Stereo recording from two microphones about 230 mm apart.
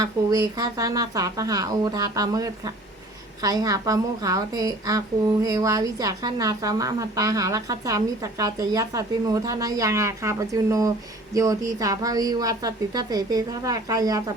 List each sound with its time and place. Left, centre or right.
0.0 s a woman's voice: centre